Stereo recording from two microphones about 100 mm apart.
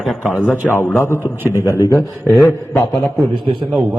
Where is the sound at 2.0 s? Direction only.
Centre (ahead or behind).